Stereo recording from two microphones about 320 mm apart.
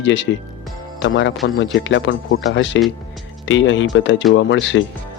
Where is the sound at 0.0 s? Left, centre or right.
Left.